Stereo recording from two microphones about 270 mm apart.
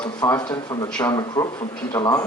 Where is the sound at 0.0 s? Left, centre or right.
Centre.